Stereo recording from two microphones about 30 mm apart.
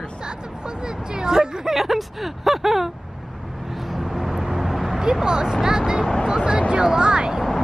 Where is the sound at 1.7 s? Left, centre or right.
Centre.